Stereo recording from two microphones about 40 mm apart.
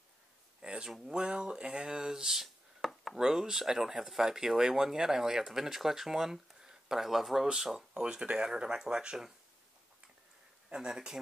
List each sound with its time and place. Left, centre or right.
0.6 s a sound: right
1.0 s speech: right
2.9 s chopping: centre
3.2 s speech: centre
10.7 s speech: centre